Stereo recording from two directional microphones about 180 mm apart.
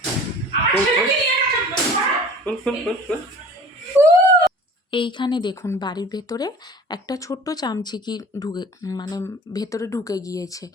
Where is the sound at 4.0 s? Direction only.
15° right (ahead or behind).